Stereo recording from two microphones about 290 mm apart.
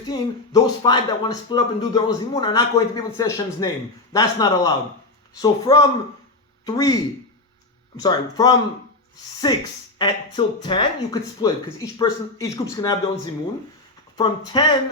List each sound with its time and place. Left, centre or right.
0.1 s speech: centre
14.2 s speech: centre